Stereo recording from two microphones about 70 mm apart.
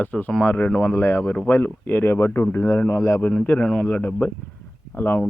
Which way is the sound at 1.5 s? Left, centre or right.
Left.